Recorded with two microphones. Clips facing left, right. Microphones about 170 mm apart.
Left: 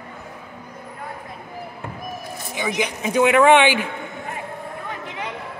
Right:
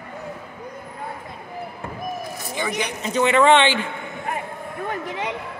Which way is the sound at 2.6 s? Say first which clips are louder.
Left 2 dB; 10° left (ahead or behind).